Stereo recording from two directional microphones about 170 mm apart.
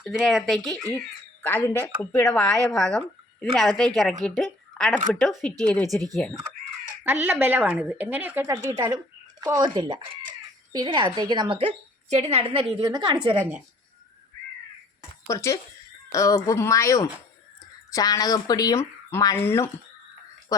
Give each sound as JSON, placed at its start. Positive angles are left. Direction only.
{"t": 0.0, "sound": "a woman's voice", "side_deg": -5}
{"t": 7.0, "sound": "a woman's voice", "side_deg": -10}
{"t": 12.8, "sound": "a woman's voice", "side_deg": -25}
{"t": 15.3, "sound": "speech", "side_deg": 15}